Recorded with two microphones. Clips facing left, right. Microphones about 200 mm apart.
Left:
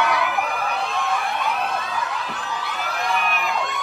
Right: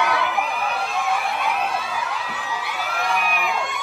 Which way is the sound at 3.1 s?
Centre (ahead or behind).